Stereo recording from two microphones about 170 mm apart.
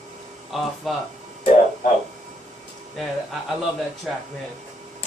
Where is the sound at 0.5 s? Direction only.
Centre (ahead or behind).